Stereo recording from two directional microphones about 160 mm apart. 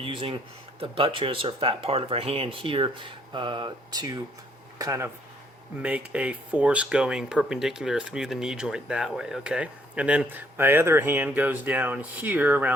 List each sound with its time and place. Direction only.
0.0 s speech: 35° right (ahead or behind); by 12.7 s 10° right (ahead or behind)